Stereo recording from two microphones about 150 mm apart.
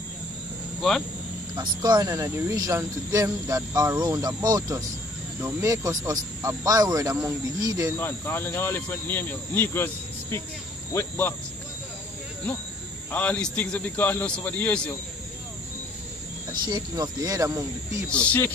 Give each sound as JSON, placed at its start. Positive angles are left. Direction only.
{"t": 0.8, "sound": "speech", "side_deg": 0}
{"t": 1.5, "sound": "speech", "side_deg": -30}
{"t": 8.0, "sound": "speech", "side_deg": 15}
{"t": 10.9, "sound": "speech", "side_deg": 15}
{"t": 13.1, "sound": "speech", "side_deg": 10}
{"t": 16.6, "sound": "speech", "side_deg": -30}
{"t": 18.1, "sound": "speech", "side_deg": 10}